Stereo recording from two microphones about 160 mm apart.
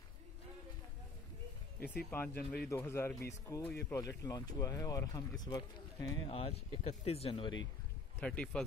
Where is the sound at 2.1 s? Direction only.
10° left (ahead or behind).